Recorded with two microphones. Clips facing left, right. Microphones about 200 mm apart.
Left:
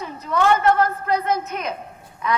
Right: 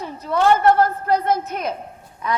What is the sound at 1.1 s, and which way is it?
Speech, 55° right (ahead or behind).